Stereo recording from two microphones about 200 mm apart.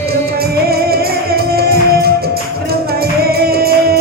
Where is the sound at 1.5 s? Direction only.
50° right (ahead or behind).